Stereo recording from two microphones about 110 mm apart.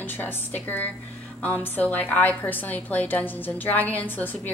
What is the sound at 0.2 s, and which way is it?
A woman's voice, 15° left (ahead or behind).